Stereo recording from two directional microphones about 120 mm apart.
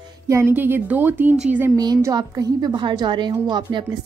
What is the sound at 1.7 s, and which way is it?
A woman's voice, 35° right (ahead or behind).